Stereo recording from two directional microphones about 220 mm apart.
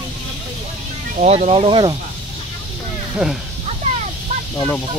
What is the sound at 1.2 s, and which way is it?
Speech, 30° right (ahead or behind).